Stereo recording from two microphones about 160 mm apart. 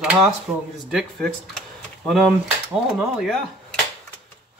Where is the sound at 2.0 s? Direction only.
Centre (ahead or behind).